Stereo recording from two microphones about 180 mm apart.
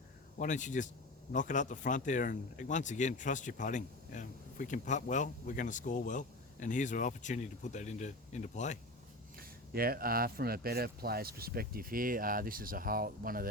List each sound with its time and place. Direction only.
0.3 s speech: 45° left (ahead or behind)
9.4 s speech: 55° right (ahead or behind)